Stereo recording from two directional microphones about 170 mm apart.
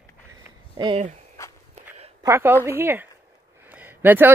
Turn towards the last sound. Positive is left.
turn(degrees=-10)  # may be behind; listen again after turning